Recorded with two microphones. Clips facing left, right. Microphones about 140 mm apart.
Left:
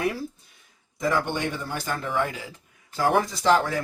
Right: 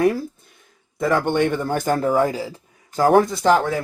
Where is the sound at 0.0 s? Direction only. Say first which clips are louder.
Right 9 dB; 45° right (ahead or behind).